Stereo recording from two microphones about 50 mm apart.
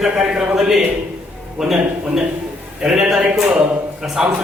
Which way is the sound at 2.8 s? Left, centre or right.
Centre.